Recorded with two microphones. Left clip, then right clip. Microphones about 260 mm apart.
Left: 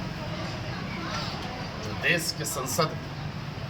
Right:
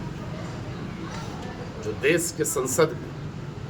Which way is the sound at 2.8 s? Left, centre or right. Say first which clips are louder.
Right 6 dB; centre.